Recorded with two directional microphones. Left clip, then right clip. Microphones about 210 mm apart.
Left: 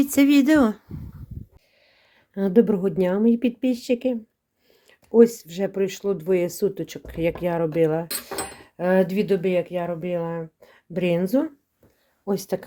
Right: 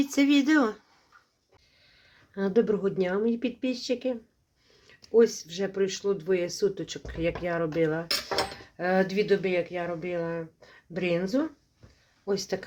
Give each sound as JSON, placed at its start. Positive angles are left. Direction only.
{"t": 0.0, "sound": "speech", "side_deg": 40}
{"t": 2.3, "sound": "speech", "side_deg": 40}